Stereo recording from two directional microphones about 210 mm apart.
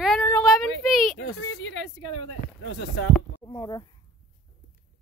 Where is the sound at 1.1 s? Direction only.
65° left (ahead or behind).